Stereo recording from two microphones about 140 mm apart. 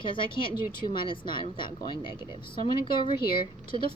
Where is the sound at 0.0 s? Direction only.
35° left (ahead or behind).